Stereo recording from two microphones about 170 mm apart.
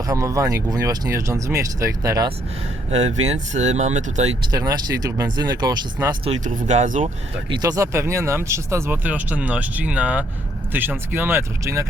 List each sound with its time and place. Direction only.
0.0 s speech: 20° right (ahead or behind)
2.9 s speech: 40° right (ahead or behind)
4.5 s speech: 20° right (ahead or behind)
6.4 s speech: 45° right (ahead or behind)
7.5 s speech: 20° right (ahead or behind)